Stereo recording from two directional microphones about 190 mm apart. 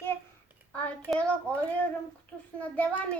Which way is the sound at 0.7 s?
5° left (ahead or behind).